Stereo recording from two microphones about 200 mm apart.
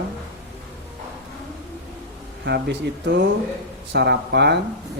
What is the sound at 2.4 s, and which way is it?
Speech, 55° right (ahead or behind).